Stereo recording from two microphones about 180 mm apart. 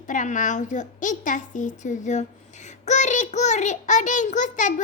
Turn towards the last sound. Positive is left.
turn(degrees=45)  # may be behind; listen again after turning